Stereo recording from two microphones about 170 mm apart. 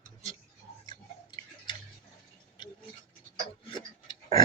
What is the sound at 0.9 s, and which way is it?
Tick-tock, 25° left (ahead or behind).